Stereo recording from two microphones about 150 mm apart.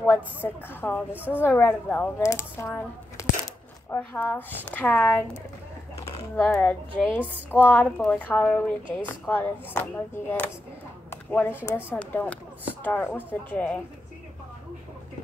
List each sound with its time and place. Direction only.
0.0 s speech: 15° left (ahead or behind)
1.1 s a woman's voice: 10° right (ahead or behind)
1.4 s speech: 10° left (ahead or behind)
11.1 s a sound: 10° left (ahead or behind)
11.6 s speech: 15° left (ahead or behind)